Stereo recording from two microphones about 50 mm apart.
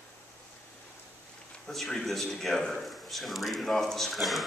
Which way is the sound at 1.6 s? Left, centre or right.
Centre.